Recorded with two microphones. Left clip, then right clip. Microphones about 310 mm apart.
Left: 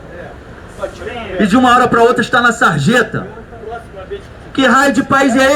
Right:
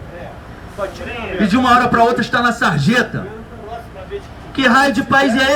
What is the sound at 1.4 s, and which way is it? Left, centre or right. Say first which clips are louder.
A man's voice: left 3 dB; centre.